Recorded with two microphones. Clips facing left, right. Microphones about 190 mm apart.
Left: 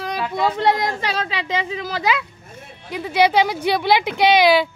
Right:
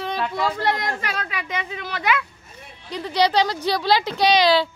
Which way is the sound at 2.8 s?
5° left (ahead or behind).